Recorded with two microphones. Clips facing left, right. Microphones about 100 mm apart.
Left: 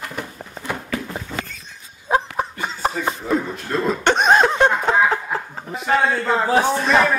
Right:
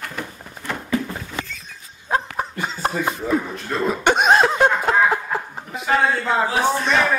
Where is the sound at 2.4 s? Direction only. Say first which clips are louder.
Left 1 dB; centre (ahead or behind).